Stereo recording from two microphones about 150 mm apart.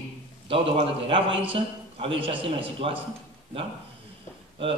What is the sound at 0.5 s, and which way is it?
A man's voice, 35° right (ahead or behind).